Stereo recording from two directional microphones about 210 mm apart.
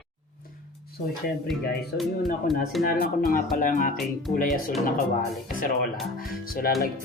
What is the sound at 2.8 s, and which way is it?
Speech, 45° left (ahead or behind).